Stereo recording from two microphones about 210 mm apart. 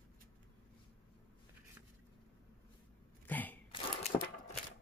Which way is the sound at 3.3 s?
10° left (ahead or behind).